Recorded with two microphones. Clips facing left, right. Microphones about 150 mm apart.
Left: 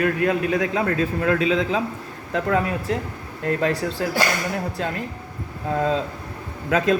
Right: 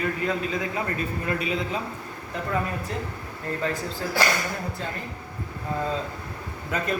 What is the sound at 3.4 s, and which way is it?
A man's voice, 75° left (ahead or behind).